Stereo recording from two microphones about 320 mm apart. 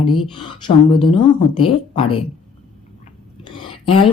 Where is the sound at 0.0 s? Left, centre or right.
Centre.